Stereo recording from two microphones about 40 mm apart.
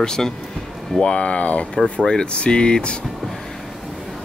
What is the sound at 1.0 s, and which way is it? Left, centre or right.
Speech, left.